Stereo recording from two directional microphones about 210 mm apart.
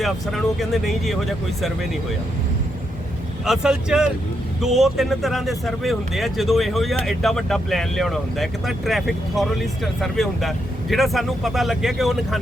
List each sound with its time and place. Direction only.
0.6 s speech: centre (ahead or behind)
3.4 s speech: 5° right (ahead or behind)